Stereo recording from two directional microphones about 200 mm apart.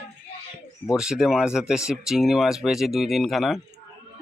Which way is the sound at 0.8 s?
5° right (ahead or behind).